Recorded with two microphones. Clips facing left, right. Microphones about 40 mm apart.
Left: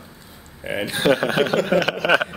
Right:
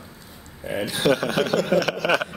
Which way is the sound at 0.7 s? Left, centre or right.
Left.